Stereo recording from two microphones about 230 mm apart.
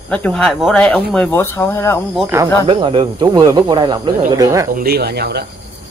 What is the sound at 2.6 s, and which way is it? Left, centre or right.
Speech, right.